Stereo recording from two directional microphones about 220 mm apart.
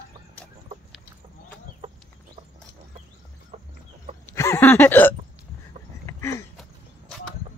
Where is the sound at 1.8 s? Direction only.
30° right (ahead or behind).